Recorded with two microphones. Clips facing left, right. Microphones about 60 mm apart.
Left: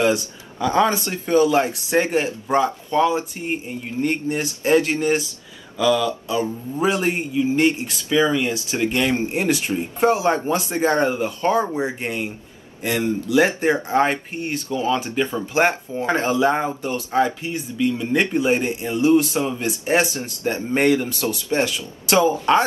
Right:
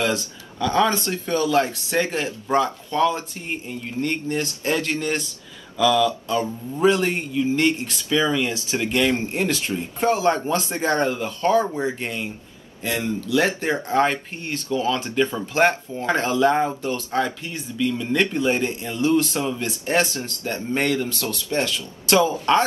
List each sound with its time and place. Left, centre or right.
0.0 s speech: centre
2.4 s speech: centre
8.7 s speech: left
12.0 s speech: left